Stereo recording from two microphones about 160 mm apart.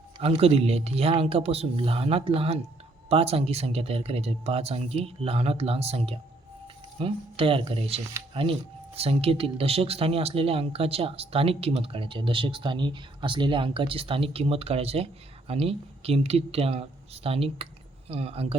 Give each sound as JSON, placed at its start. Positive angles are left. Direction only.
{"t": 0.2, "sound": "speech", "side_deg": -40}